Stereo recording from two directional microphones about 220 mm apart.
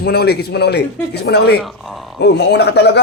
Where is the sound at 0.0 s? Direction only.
45° left (ahead or behind).